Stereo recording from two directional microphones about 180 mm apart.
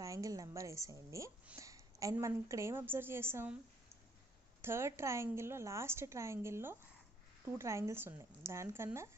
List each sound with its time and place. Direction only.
0.0 s a woman's voice: 20° right (ahead or behind)
4.6 s a woman's voice: 15° right (ahead or behind)